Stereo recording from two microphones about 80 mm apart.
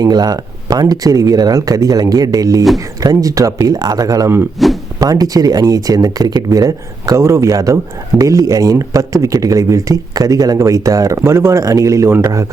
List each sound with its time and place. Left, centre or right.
0.0 s speech: right
4.6 s speech: centre
4.9 s speech: right
7.2 s speech: right